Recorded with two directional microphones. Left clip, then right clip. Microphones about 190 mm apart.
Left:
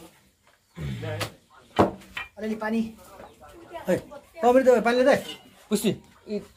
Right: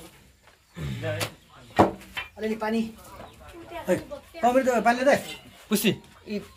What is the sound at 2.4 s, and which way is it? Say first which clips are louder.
Speech: right 1 dB; 20° right (ahead or behind).